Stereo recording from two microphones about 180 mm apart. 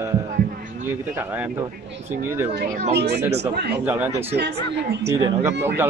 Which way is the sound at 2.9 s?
65° right (ahead or behind).